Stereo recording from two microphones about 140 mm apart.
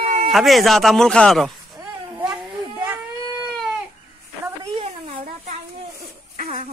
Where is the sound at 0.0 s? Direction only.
65° right (ahead or behind).